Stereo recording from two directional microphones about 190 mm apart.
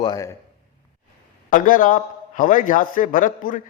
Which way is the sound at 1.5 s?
45° left (ahead or behind).